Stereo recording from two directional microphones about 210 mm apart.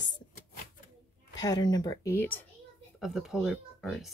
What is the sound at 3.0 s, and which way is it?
Speech, centre (ahead or behind).